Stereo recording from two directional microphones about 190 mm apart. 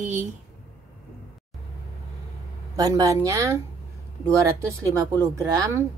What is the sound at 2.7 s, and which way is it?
Speech, 20° right (ahead or behind).